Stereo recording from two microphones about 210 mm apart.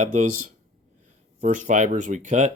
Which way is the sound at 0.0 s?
35° right (ahead or behind).